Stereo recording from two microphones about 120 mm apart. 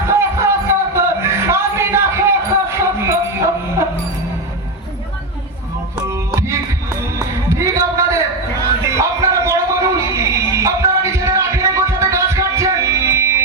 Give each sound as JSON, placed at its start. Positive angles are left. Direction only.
{"t": 0.1, "sound": "music", "side_deg": -20}
{"t": 6.1, "sound": "music", "side_deg": -25}
{"t": 7.5, "sound": "a sound", "side_deg": -25}
{"t": 8.8, "sound": "music", "side_deg": -25}